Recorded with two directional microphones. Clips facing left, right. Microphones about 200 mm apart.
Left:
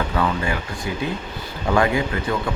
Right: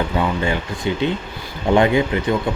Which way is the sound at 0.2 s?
25° right (ahead or behind).